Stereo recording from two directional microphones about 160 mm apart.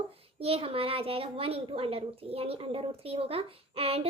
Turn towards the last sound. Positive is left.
turn(degrees=-35)  # may be behind; listen again after turning